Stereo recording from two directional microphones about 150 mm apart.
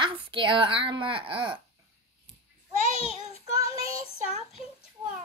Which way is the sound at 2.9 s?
40° left (ahead or behind).